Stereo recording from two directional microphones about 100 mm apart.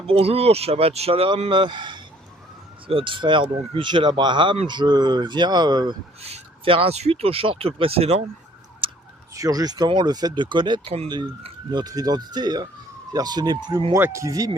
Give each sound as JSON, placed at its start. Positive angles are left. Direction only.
{"t": 0.1, "sound": "speech", "side_deg": -85}
{"t": 1.5, "sound": "speech", "side_deg": -50}
{"t": 6.2, "sound": "speech", "side_deg": -80}
{"t": 8.8, "sound": "a sound", "side_deg": -60}
{"t": 9.3, "sound": "speech", "side_deg": -35}
{"t": 9.8, "sound": "speech", "side_deg": -50}
{"t": 10.8, "sound": "speech", "side_deg": -90}
{"t": 11.7, "sound": "speech", "side_deg": -45}
{"t": 13.9, "sound": "speech", "side_deg": -30}